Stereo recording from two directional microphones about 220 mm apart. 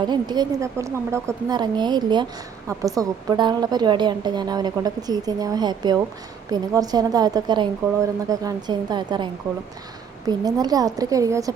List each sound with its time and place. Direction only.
0.0 s a woman's voice: 20° right (ahead or behind)